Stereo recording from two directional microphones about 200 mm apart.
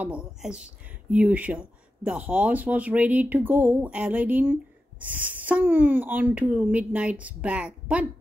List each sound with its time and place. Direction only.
0.0 s speech: 5° right (ahead or behind)